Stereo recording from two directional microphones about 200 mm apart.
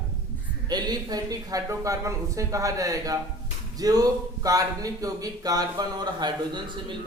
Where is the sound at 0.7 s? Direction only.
20° right (ahead or behind).